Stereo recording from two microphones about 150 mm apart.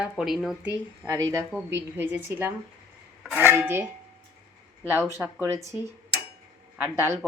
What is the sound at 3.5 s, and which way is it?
Speech, 15° right (ahead or behind).